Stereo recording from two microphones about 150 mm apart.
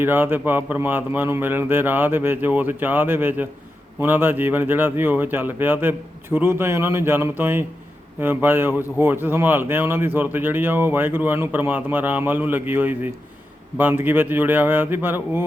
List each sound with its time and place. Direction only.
0.0 s speech: 15° right (ahead or behind)